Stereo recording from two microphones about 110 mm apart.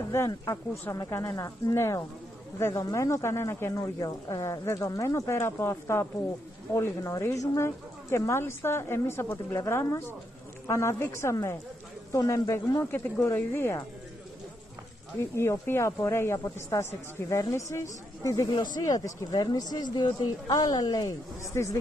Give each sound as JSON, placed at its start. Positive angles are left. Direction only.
{"t": 0.5, "sound": "speech", "side_deg": 25}
{"t": 15.1, "sound": "speech", "side_deg": 25}